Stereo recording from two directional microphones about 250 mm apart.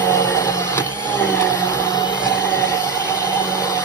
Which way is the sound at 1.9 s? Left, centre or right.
Centre.